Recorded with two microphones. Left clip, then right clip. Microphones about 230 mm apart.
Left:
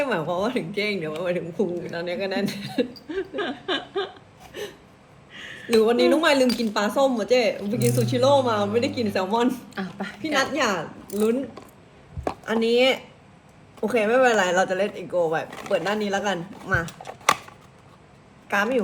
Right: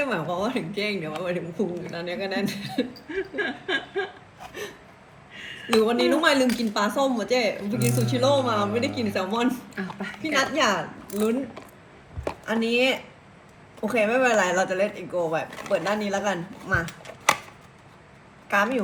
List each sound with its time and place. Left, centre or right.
0.0 s speech: centre
3.2 s laughter: left
5.6 s a woman's voice: centre
18.4 s speech: centre